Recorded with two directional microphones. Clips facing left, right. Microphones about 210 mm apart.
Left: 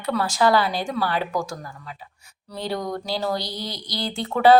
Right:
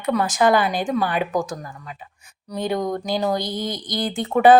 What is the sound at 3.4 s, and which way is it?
Speech, 50° right (ahead or behind).